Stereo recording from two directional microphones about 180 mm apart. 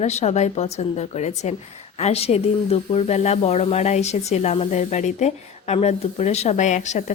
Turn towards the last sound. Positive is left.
turn(degrees=40)  # may be behind; listen again after turning